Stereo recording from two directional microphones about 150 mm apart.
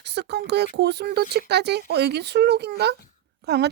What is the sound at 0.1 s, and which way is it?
Speech, 90° right.